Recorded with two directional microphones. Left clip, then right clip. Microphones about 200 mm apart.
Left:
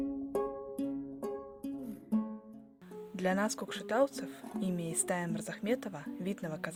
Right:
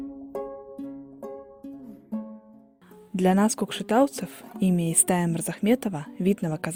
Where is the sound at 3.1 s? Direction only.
40° right (ahead or behind).